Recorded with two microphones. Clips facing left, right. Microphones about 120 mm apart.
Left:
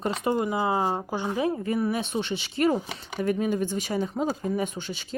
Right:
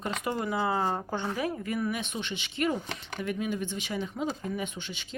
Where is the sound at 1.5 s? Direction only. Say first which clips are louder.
Left 5 dB; 30° left (ahead or behind).